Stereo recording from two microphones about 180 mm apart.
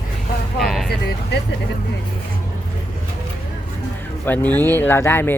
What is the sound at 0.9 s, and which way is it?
Vehicle, 65° left (ahead or behind).